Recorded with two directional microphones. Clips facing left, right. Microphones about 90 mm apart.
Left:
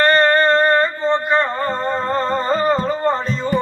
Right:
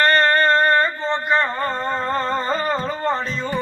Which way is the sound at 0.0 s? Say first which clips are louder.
Left 2 dB; 25° left (ahead or behind).